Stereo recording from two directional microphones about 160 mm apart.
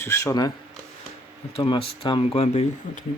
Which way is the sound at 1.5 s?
35° left (ahead or behind).